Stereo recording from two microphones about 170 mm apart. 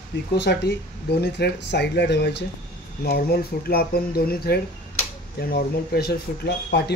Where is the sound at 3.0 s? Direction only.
65° left (ahead or behind).